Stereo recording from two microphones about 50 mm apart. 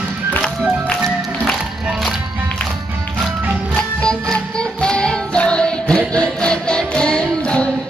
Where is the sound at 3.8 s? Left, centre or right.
Centre.